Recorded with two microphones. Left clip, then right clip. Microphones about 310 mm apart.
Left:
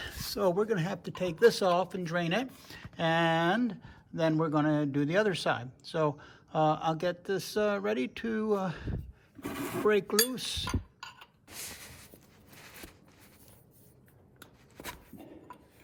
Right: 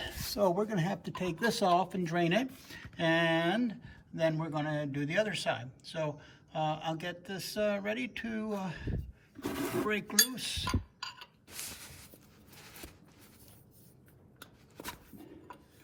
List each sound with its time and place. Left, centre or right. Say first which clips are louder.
0.0 s a man's voice: even; centre
9.4 s speech: right 1 dB; centre
9.9 s a man's voice: left 3 dB; centre
11.8 s a sound: left 2 dB; left